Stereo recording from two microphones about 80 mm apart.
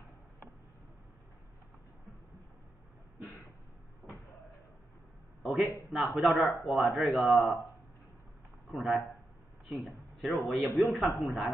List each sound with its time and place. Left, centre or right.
4.0 s cupboard open or close: left
5.4 s a man's voice: centre
8.7 s a man's voice: centre